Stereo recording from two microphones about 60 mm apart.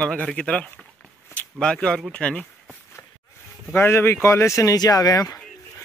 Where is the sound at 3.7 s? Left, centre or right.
Left.